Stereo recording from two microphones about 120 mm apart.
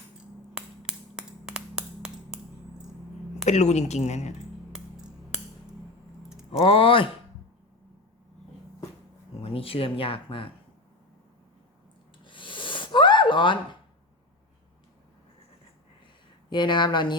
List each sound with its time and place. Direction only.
0.9 s finger snapping: 5° right (ahead or behind)
3.4 s a woman's voice: 70° left (ahead or behind)
4.7 s a sound: 5° right (ahead or behind)
6.2 s typing: 5° right (ahead or behind)
6.6 s speech: 50° left (ahead or behind)
9.4 s speech: 50° left (ahead or behind)
12.2 s a sound: 45° left (ahead or behind)
16.5 s speech: 40° left (ahead or behind)